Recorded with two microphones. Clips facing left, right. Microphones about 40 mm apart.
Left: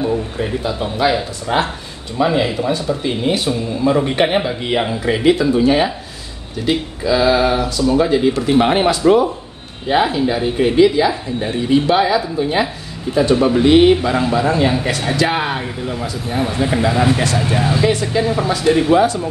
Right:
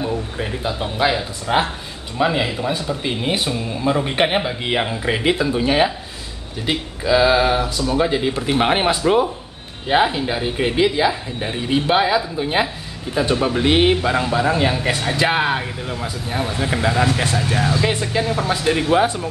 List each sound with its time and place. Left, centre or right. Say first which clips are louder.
0.4 s speech: left 3 dB; centre
3.0 s speech: left 3 dB; centre
13.4 s speech: left 5 dB; centre
13.7 s speech: left 5 dB; centre
16.9 s speech: left 3 dB; centre
18.6 s speech: left 6 dB; centre
18.9 s speech: left 3 dB; right